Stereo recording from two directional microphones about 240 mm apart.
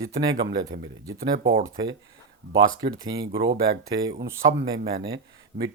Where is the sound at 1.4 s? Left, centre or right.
Right.